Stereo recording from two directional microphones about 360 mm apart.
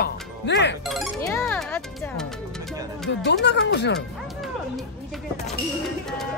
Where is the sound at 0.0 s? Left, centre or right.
Left.